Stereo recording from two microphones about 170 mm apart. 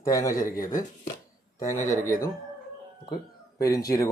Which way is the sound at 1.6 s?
45° left (ahead or behind).